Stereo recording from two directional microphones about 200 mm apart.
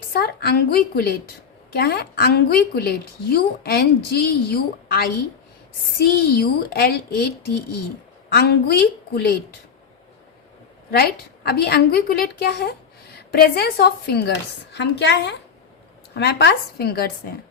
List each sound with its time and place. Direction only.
0.1 s a woman's voice: 50° left (ahead or behind)
10.9 s a woman's voice: 50° left (ahead or behind)